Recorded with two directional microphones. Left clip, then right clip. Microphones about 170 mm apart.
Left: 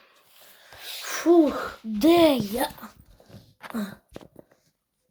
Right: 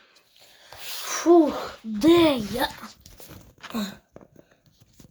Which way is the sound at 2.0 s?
40° left (ahead or behind).